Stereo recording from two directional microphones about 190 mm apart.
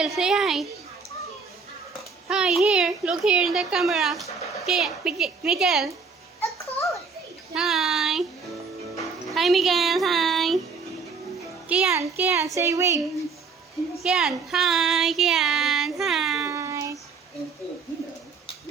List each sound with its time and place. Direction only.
0.0 s speech: centre (ahead or behind)
2.0 s speech: 5° right (ahead or behind)
6.6 s a sound: 15° left (ahead or behind)
7.5 s a child's voice: centre (ahead or behind)
9.0 s music: centre (ahead or behind)
11.7 s a child's voice: 10° right (ahead or behind)
14.0 s speech: centre (ahead or behind)
16.4 s child singing: 15° right (ahead or behind)